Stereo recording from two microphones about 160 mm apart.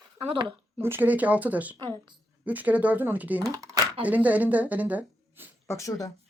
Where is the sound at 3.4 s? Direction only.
20° right (ahead or behind).